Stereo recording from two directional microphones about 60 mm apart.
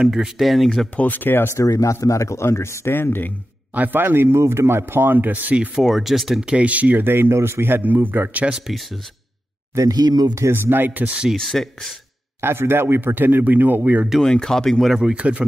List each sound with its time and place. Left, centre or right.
0.0 s speech: centre
0.9 s speech: left
1.5 s speech: left
3.7 s speech: right
5.8 s speech: centre
6.4 s speech: right
8.5 s speech: centre
9.8 s speech: right
10.5 s speech: right
11.3 s speech: centre
12.4 s speech: right
14.2 s speech: centre
15.0 s speech: centre